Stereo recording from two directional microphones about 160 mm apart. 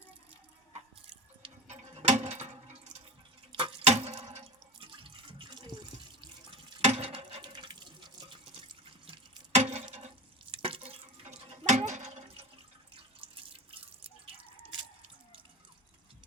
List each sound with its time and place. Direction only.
0.7 s drip: 35° right (ahead or behind)
3.5 s water: 30° right (ahead or behind)
6.5 s water: 40° right (ahead or behind)
9.6 s a sound: 45° right (ahead or behind)
10.5 s a sound: 35° right (ahead or behind)
13.2 s drip: 35° right (ahead or behind)